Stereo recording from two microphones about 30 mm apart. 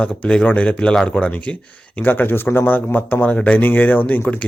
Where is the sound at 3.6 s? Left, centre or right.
Left.